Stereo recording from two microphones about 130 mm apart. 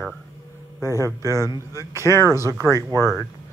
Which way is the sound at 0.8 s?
20° right (ahead or behind).